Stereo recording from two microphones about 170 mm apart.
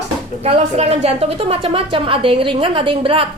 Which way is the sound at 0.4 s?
35° right (ahead or behind).